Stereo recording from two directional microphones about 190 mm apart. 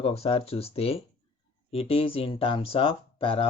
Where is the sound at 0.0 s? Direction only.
30° left (ahead or behind).